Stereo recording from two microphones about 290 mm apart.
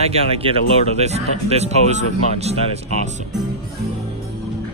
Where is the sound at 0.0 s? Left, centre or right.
Right.